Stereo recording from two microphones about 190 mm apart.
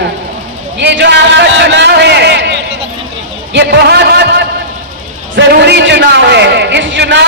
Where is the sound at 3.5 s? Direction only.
60° right (ahead or behind).